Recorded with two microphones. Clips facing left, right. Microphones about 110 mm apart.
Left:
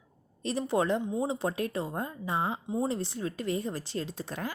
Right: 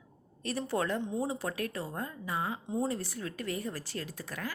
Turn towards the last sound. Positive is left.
turn(degrees=25)  # may be behind; listen again after turning